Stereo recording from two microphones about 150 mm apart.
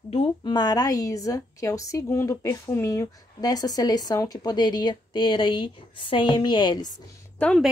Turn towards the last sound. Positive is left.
turn(degrees=5)  # may be behind; listen again after turning